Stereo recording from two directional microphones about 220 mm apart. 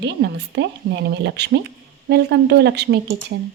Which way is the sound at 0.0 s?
50° right (ahead or behind).